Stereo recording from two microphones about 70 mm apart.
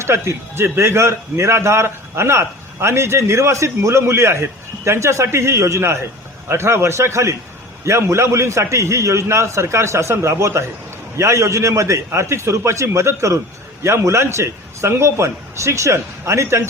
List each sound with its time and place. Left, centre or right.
0.0 s a man's voice: right